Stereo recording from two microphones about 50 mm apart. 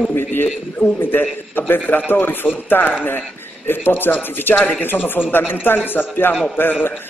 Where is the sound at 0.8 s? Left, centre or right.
Left.